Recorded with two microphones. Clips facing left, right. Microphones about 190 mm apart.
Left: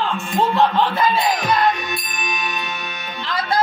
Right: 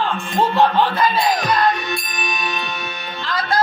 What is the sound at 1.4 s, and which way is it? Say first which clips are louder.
Music: even; 20° left (ahead or behind).